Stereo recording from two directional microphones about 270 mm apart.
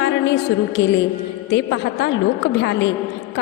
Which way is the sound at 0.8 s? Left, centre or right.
Left.